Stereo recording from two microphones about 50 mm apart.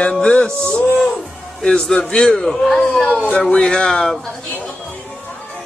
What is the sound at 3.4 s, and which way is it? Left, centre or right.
Speech, centre.